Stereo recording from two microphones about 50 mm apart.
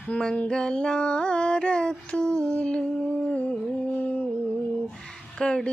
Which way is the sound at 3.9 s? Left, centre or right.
Left.